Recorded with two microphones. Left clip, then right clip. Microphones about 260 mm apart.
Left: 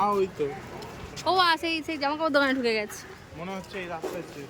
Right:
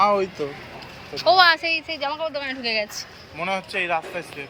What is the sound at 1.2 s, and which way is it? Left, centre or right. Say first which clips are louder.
A woman's voice: right 7 dB; centre.